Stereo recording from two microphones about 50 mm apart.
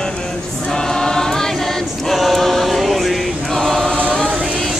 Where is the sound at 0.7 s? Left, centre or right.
Centre.